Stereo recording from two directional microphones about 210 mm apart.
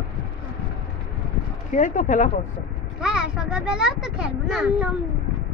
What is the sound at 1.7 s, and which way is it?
Speech, 40° left (ahead or behind).